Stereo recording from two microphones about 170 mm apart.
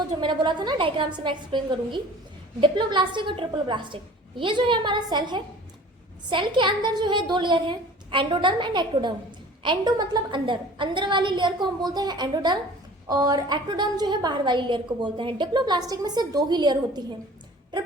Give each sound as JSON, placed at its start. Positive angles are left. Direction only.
{"t": 0.2, "sound": "a woman's voice", "side_deg": -25}